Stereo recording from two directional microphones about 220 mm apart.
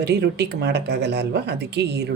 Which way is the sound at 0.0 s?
50° right (ahead or behind).